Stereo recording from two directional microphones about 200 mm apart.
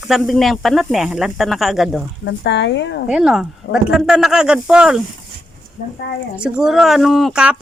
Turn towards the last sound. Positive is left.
turn(degrees=0)  # may be behind; listen again after turning